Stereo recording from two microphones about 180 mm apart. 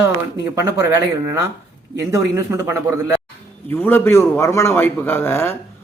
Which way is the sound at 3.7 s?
10° left (ahead or behind).